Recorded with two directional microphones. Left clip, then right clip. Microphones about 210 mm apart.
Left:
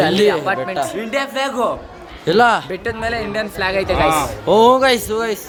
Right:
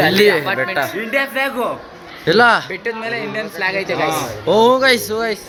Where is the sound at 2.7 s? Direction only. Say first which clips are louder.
Left 1 dB; 45° left (ahead or behind).